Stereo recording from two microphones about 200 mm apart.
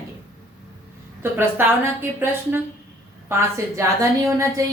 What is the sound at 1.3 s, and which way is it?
Speech, 10° right (ahead or behind).